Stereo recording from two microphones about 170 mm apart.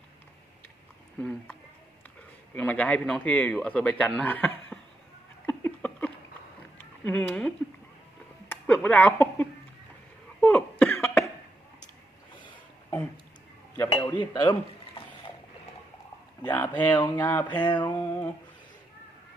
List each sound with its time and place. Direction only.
1.2 s speech: 10° left (ahead or behind)
2.6 s speech: 10° left (ahead or behind)
5.5 s a sound: 10° left (ahead or behind)
8.4 s speech: 10° left (ahead or behind)
10.4 s cough: 10° left (ahead or behind)
13.9 s speech: 25° left (ahead or behind)
16.4 s speech: 10° left (ahead or behind)
17.5 s speech: 25° left (ahead or behind)
17.9 s music: 15° left (ahead or behind)